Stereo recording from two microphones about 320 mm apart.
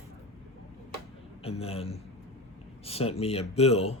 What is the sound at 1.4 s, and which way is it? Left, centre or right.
Speech, centre.